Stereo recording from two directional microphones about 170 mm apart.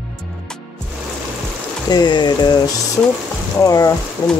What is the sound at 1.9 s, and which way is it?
Speech, 25° left (ahead or behind).